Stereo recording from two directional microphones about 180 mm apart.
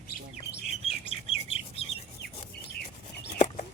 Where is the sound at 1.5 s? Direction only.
35° left (ahead or behind).